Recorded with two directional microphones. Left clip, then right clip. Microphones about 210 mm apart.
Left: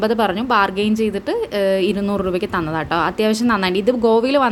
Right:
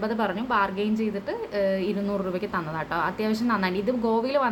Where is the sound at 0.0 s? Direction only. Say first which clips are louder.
Left 9 dB; 45° left (ahead or behind).